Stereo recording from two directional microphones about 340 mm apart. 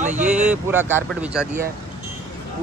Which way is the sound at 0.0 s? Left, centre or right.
Right.